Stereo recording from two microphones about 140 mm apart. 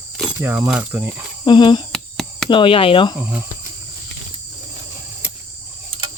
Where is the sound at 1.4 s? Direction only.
35° left (ahead or behind).